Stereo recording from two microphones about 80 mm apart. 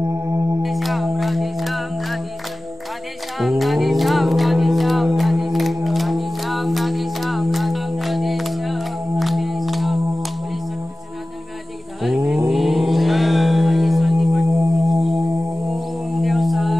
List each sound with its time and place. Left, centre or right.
0.6 s a capella: centre
3.3 s music: centre
12.0 s a sound: centre
14.9 s singing bowl: centre
16.2 s mantra: centre